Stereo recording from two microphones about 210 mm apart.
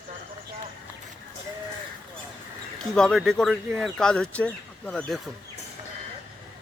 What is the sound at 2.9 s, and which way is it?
Speech, centre (ahead or behind).